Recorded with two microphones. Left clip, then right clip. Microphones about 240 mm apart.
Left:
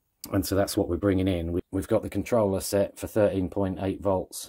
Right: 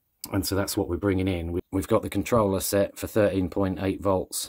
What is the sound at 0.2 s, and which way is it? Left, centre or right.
Speech, centre.